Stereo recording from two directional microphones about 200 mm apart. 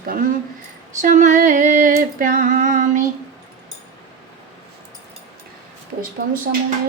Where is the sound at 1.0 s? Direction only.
35° right (ahead or behind).